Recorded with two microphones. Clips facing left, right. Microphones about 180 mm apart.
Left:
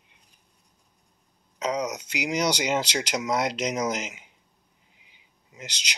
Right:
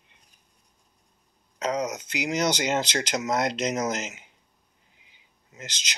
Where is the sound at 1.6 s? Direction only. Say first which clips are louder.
Even; 10° left (ahead or behind).